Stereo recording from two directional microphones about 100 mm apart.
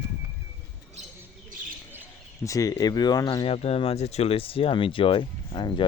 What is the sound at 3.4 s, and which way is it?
Speech, 90° left.